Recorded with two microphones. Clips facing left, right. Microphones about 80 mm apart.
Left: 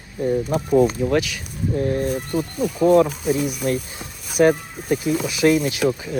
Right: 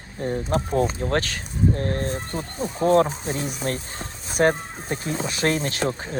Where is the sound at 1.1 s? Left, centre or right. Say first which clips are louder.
Left 4 dB; right.